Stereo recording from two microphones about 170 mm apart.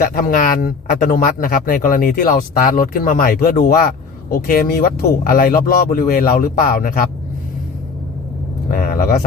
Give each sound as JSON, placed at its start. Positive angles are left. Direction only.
{"t": 0.0, "sound": "speech", "side_deg": 55}
{"t": 8.7, "sound": "speech", "side_deg": 55}